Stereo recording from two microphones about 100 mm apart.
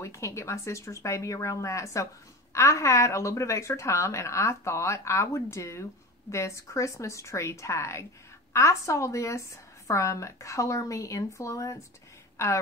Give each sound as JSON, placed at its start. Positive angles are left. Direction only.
{"t": 0.0, "sound": "a woman's voice", "side_deg": 30}